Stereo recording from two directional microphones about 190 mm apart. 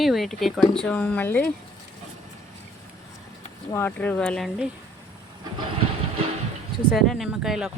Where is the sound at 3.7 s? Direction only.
10° left (ahead or behind).